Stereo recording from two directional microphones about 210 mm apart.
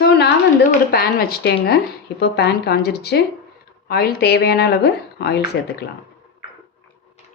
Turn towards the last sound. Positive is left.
turn(degrees=50)  # may be behind; listen again after turning